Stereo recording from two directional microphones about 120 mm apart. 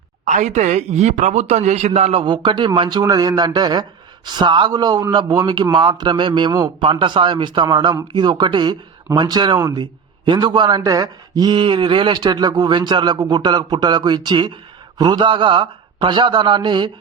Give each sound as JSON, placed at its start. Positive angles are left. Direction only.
{"t": 0.3, "sound": "speech", "side_deg": -85}
{"t": 2.2, "sound": "a man's voice", "side_deg": -45}